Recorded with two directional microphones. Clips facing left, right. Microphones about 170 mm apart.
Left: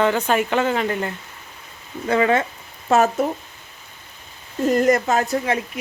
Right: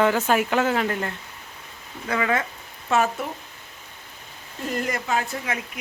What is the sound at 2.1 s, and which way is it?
Speech, 30° left (ahead or behind).